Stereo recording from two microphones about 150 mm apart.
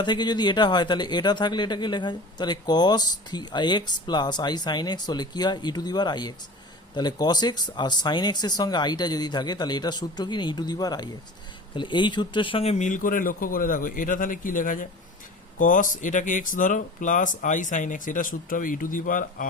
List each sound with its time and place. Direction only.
0.0 s speech: 30° left (ahead or behind); by 19.5 s 60° left (ahead or behind)